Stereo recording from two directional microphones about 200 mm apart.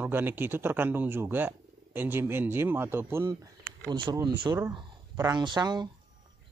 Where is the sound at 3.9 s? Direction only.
25° right (ahead or behind).